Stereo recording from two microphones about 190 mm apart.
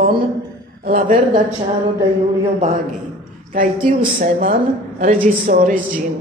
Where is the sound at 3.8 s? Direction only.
45° right (ahead or behind).